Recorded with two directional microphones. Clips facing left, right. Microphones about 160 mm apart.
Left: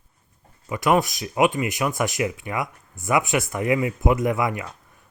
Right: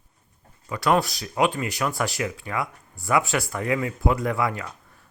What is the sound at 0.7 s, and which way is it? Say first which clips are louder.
Speech: left 2 dB; 15° left (ahead or behind).